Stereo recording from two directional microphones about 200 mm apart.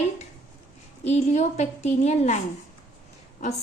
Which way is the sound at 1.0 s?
35° left (ahead or behind).